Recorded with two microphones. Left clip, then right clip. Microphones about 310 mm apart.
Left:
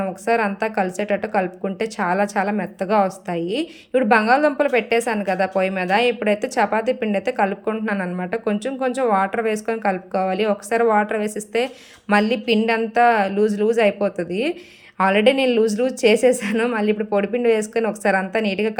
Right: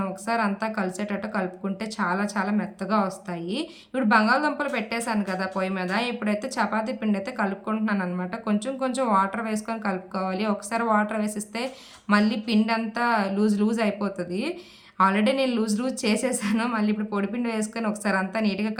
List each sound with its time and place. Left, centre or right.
0.0 s a woman's voice: centre